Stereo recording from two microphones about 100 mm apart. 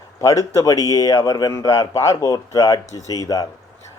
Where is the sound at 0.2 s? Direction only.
30° left (ahead or behind).